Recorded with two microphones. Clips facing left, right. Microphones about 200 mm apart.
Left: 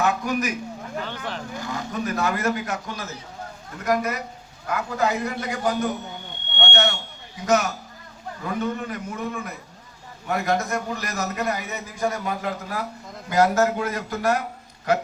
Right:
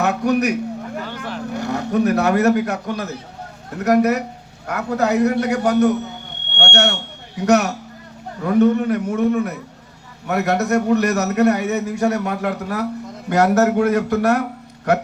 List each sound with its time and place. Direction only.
0.0 s a man's voice: 70° right (ahead or behind)
1.0 s speech: 10° right (ahead or behind)
1.5 s a man's voice: 70° right (ahead or behind)